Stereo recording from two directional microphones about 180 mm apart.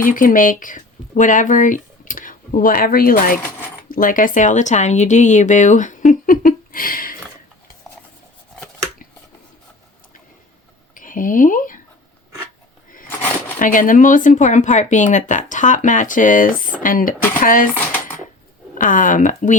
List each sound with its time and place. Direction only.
0.0 s speech: 50° left (ahead or behind)
10.9 s a sound: 50° left (ahead or behind)
13.6 s speech: 50° left (ahead or behind)
18.7 s speech: 45° left (ahead or behind)